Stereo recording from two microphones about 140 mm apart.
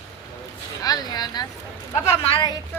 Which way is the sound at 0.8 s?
25° left (ahead or behind).